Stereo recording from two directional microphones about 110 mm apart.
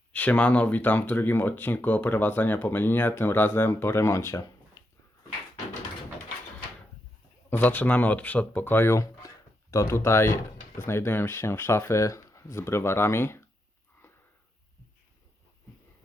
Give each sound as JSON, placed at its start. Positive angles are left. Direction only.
{"t": 0.1, "sound": "speech", "side_deg": 15}
{"t": 7.5, "sound": "speech", "side_deg": 15}